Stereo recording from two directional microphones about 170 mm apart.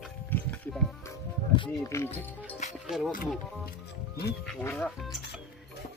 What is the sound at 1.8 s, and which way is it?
Speech, 15° left (ahead or behind).